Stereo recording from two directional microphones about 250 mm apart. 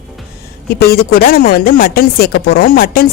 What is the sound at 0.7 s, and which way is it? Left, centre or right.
A woman's voice, left.